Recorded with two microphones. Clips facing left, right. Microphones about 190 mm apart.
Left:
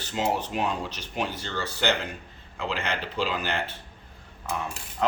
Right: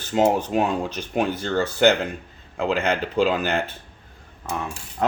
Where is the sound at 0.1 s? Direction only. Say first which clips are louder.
Right 8 dB; 50° right (ahead or behind).